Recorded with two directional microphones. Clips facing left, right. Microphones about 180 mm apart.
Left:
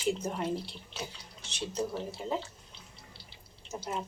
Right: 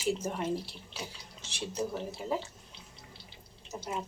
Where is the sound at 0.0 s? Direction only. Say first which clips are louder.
Even; 5° right (ahead or behind).